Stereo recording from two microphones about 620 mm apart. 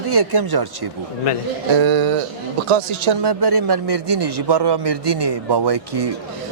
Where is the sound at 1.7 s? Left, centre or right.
Right.